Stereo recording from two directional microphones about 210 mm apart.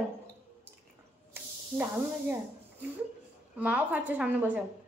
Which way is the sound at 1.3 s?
10° right (ahead or behind).